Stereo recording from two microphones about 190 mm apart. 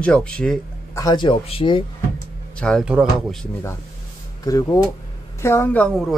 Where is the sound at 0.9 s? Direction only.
20° left (ahead or behind).